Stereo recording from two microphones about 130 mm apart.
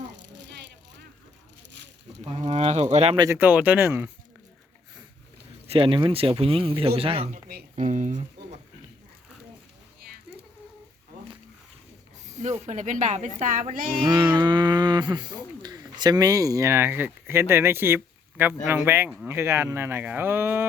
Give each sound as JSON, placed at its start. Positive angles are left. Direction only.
{"t": 2.2, "sound": "speech", "side_deg": -55}
{"t": 3.2, "sound": "speech", "side_deg": -25}
{"t": 3.4, "sound": "speech", "side_deg": -10}
{"t": 5.6, "sound": "speech", "side_deg": -45}
{"t": 7.8, "sound": "speech", "side_deg": -70}
{"t": 12.2, "sound": "speech", "side_deg": -65}
{"t": 13.4, "sound": "speech", "side_deg": -80}
{"t": 14.1, "sound": "speech", "side_deg": -35}